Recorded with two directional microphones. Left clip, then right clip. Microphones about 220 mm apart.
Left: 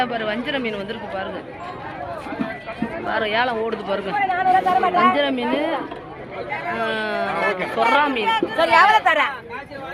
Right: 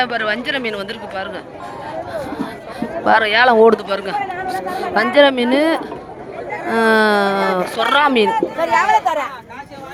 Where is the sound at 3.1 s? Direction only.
65° right (ahead or behind).